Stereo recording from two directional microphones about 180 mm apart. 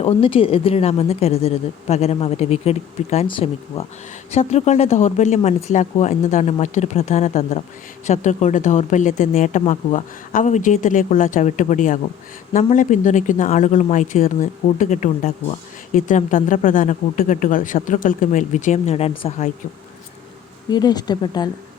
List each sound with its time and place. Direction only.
0.0 s speech: 30° left (ahead or behind)
20.7 s speech: 20° left (ahead or behind)